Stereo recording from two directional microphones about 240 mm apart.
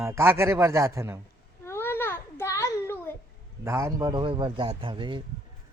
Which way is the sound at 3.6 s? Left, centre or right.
Centre.